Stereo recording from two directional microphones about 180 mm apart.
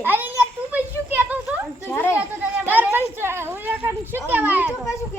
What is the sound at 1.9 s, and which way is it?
Speech, 15° left (ahead or behind).